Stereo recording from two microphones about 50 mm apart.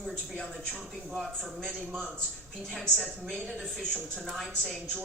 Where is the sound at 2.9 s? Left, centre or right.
Centre.